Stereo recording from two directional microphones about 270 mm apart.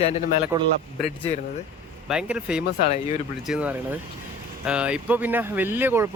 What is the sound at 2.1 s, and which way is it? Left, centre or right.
Speech, centre.